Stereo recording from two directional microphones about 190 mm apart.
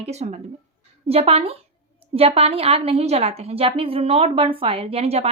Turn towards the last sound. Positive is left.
turn(degrees=-30)  # may be behind; listen again after turning